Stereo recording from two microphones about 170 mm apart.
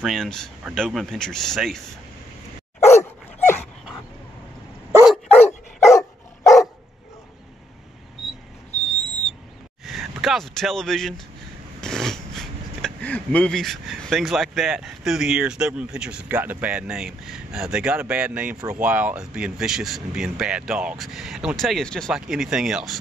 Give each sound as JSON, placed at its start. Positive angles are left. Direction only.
{"t": 0.0, "sound": "speech", "side_deg": 0}
{"t": 2.9, "sound": "dog", "side_deg": 15}
{"t": 5.0, "sound": "dog", "side_deg": 0}
{"t": 5.9, "sound": "dog", "side_deg": 20}
{"t": 9.8, "sound": "a sound", "side_deg": 0}
{"t": 11.8, "sound": "speech", "side_deg": 5}